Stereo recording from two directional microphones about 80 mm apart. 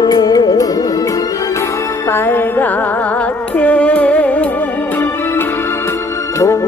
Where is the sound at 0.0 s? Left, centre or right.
Left.